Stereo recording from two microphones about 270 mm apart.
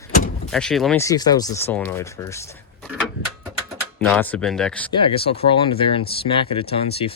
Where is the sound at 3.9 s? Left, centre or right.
Centre.